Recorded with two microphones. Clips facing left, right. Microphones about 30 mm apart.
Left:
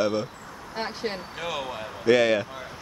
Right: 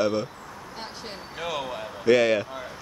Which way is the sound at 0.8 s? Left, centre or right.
Left.